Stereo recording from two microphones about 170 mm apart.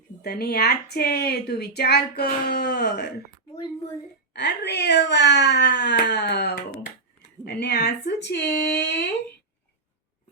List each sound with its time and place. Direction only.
0.2 s a woman's voice: 65° left (ahead or behind)
4.4 s a woman's voice: 80° left
8.7 s speech: 90° left